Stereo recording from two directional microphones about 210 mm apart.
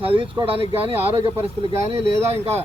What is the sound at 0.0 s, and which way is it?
Speech, 25° right (ahead or behind).